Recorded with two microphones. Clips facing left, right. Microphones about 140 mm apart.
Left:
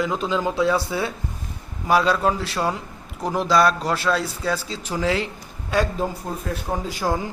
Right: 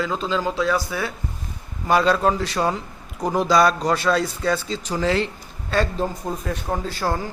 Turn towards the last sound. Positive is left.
turn(degrees=15)  # may be behind; listen again after turning